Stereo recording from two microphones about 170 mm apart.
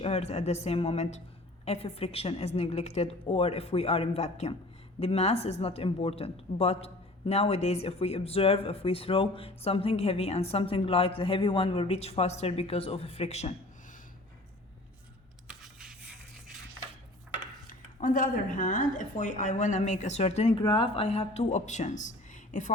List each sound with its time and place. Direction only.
0.0 s a woman's voice: 40° left (ahead or behind)
15.4 s a sound: 5° right (ahead or behind)
17.7 s a woman's voice: 50° left (ahead or behind)
20.6 s a woman's voice: 30° left (ahead or behind); by 22.7 s 45° left (ahead or behind)